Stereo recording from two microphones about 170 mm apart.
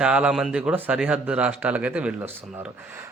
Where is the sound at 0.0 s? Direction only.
5° right (ahead or behind).